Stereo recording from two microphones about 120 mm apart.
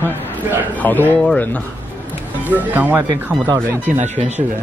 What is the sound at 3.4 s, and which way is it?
Speech, 25° right (ahead or behind).